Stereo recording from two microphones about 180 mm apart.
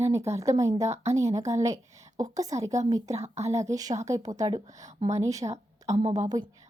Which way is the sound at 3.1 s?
35° right (ahead or behind).